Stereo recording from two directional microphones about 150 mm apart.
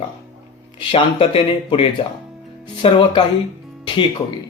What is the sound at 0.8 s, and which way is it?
Speech, 35° left (ahead or behind).